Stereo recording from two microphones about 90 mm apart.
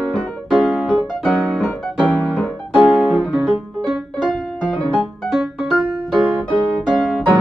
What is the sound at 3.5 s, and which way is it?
Music, 5° right (ahead or behind).